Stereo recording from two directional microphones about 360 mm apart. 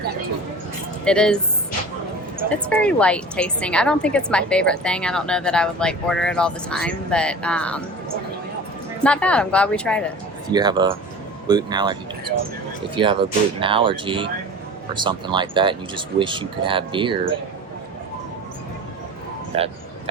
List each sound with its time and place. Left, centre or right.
1.0 s a woman's voice: centre
2.6 s a woman's voice: centre
9.0 s a woman's voice: centre
10.5 s speech: centre
13.0 s speech: centre
19.5 s speech: centre